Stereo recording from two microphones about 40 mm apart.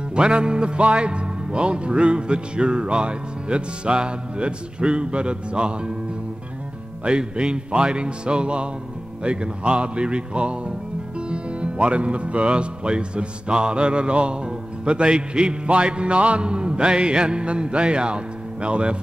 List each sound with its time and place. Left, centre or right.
0.1 s music: right
7.1 s music: right